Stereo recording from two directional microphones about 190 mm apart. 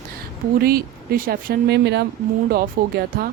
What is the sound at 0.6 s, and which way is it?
Speech, 50° right (ahead or behind).